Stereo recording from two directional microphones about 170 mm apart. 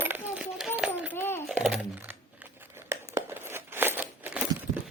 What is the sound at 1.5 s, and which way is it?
Coin, 5° right (ahead or behind).